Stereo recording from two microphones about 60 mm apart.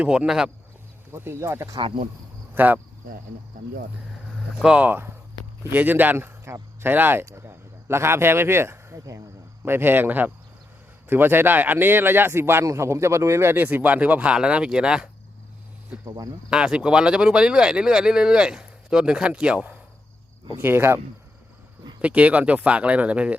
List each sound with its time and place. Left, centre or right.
0.1 s speech: centre
1.1 s speech: right
2.6 s speech: right
4.6 s speech: centre
5.7 s speech: right
7.4 s a sound: right
9.6 s speech: right
13.5 s speech: right; by 15.1 s centre
16.0 s speech: right
16.5 s speech: centre
20.6 s speech: right
22.0 s speech: right